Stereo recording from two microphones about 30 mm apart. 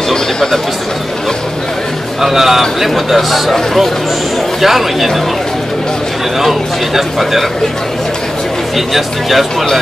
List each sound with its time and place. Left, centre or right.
0.1 s a sound: centre
2.2 s a man's voice: centre
4.6 s speech: centre
6.4 s a man's voice: centre
8.7 s a man's voice: centre